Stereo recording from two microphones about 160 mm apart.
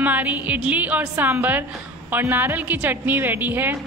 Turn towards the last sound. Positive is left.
turn(degrees=-10)  # may be behind; listen again after turning